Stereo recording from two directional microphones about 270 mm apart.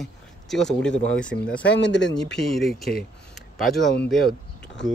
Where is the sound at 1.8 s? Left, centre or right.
Left.